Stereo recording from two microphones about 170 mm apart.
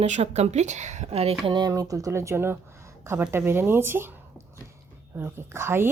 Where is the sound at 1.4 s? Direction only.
25° right (ahead or behind).